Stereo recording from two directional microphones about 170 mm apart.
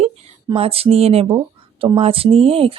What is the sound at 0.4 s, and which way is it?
Speech, 35° right (ahead or behind).